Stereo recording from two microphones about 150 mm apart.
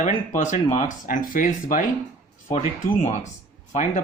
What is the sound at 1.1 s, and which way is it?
Speech, 65° left (ahead or behind).